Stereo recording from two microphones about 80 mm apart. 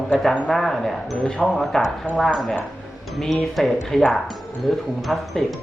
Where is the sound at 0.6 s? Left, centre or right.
Centre.